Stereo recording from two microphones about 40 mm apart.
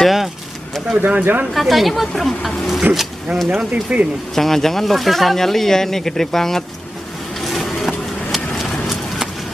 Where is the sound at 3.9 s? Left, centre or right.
Right.